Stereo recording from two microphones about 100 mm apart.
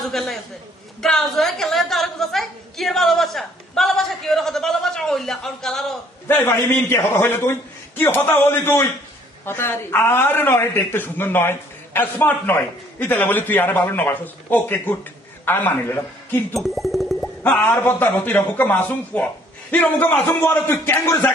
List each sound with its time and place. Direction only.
0.0 s a woman's voice: centre (ahead or behind)
6.2 s a man's voice: 20° left (ahead or behind)
16.6 s a sound: centre (ahead or behind)
17.5 s a man's voice: 10° left (ahead or behind)